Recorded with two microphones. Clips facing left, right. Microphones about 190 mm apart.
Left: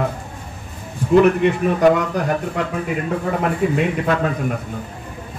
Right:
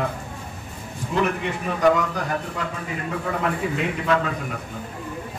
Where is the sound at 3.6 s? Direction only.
50° left (ahead or behind).